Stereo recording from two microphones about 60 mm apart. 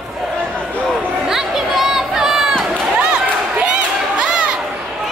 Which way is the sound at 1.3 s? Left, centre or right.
Centre.